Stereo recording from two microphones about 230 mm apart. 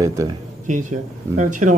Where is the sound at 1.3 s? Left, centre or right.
Right.